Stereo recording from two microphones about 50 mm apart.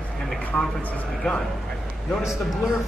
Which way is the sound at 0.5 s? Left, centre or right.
Left.